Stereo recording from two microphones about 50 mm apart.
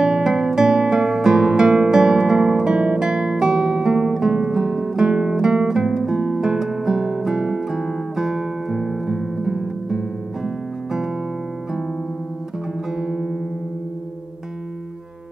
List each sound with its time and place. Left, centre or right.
0.0 s music: centre
13.0 s music: centre